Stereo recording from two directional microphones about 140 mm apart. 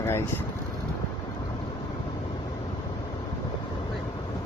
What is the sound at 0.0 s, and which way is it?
Vehicle, 15° left (ahead or behind).